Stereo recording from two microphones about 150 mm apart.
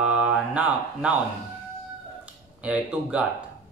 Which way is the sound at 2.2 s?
5° right (ahead or behind).